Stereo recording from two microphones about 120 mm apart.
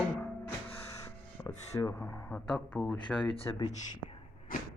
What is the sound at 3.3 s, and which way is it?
Speech, 35° left (ahead or behind).